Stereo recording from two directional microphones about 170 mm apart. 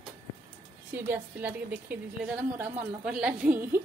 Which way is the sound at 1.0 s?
10° right (ahead or behind).